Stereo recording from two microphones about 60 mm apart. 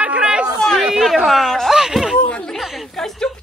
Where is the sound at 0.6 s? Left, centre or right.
Centre.